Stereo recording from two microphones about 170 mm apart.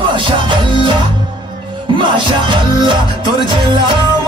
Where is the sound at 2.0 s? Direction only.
30° right (ahead or behind).